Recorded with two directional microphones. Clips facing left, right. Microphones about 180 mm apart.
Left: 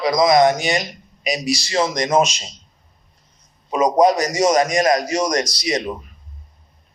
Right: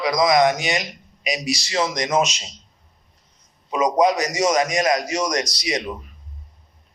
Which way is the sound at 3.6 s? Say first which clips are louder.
Left 3 dB; 40° left (ahead or behind).